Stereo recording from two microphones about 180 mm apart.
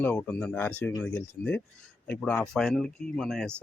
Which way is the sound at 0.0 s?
10° left (ahead or behind).